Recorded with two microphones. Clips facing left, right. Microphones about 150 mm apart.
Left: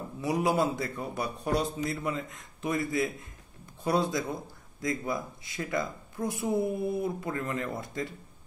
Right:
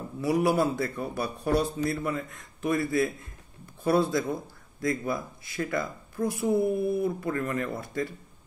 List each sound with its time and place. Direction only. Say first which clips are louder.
0.2 s a man's voice: right 3 dB; 20° left (ahead or behind)